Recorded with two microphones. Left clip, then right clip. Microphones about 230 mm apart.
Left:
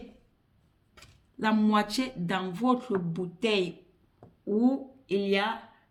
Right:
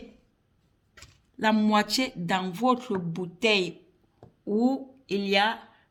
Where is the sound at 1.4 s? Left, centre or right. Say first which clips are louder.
Right 3 dB; right.